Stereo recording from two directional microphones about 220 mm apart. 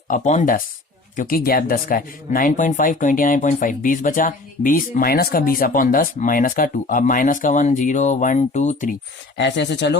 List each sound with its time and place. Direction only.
0.1 s speech: 35° left (ahead or behind)
9.4 s speech: 50° left (ahead or behind)